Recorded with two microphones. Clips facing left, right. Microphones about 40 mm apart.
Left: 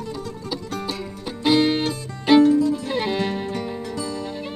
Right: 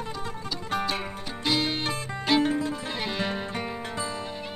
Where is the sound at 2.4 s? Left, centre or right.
Right.